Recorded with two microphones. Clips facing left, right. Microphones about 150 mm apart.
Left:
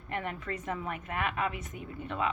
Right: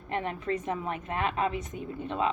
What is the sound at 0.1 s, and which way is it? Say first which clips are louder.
Speech: right 5 dB; 25° right (ahead or behind).